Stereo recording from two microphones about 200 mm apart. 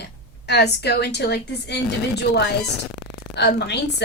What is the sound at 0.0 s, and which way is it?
A woman's voice, 55° left (ahead or behind).